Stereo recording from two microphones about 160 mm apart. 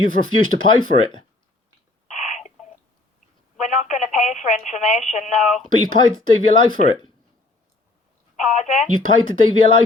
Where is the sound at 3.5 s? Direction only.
50° left (ahead or behind).